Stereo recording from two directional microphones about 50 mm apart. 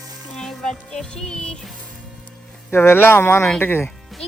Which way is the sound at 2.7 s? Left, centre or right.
Left.